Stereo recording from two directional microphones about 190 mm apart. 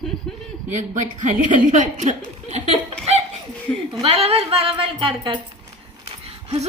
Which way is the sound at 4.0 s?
30° right (ahead or behind).